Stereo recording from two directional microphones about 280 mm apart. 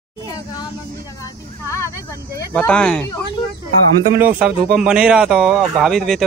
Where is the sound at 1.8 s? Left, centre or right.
Centre.